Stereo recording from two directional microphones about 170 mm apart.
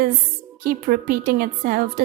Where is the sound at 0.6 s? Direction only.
60° right (ahead or behind).